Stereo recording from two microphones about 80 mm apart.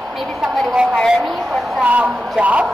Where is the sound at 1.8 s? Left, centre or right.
Centre.